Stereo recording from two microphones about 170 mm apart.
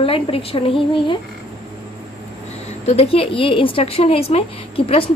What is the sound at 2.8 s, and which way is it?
A woman's voice, 35° left (ahead or behind).